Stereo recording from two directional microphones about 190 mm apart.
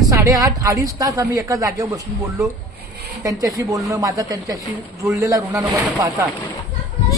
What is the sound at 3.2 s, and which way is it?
A woman's voice, 20° right (ahead or behind).